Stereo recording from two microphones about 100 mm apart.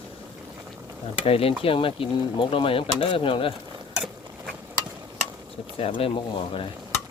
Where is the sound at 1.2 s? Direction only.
70° left (ahead or behind).